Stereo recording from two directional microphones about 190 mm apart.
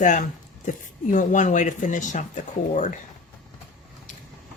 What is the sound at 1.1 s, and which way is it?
Speech, 40° left (ahead or behind).